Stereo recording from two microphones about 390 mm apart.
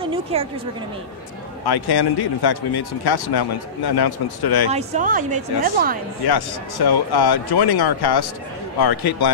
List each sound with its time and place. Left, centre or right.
0.0 s a sound: centre
1.7 s speech: left
4.6 s speech: centre
6.2 s speech: left